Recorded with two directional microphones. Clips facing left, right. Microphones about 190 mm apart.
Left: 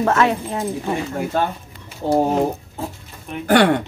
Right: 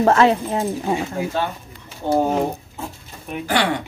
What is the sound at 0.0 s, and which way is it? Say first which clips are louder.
Speech: right 3 dB; 30° right (ahead or behind).